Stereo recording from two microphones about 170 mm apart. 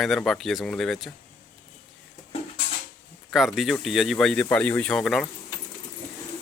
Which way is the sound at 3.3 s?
Centre (ahead or behind).